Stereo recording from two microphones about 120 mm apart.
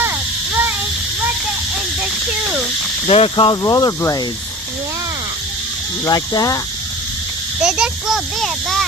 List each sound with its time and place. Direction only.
2.0 s a sound: 10° right (ahead or behind)
3.1 s speech: 50° left (ahead or behind)
3.6 s speech: 30° left (ahead or behind)
6.1 s speech: 30° left (ahead or behind)
7.6 s a child's voice: 5° right (ahead or behind)